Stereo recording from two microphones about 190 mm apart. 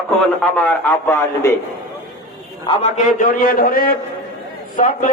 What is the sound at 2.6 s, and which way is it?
A man's voice, 30° left (ahead or behind).